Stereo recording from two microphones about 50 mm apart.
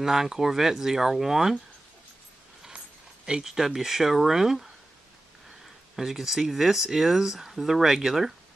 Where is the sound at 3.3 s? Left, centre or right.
Centre.